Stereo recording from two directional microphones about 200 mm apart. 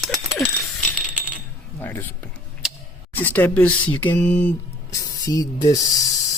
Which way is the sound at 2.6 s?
5° right (ahead or behind).